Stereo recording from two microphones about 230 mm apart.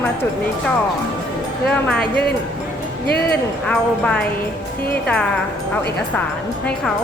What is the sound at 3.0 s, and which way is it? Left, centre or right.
Speech, left.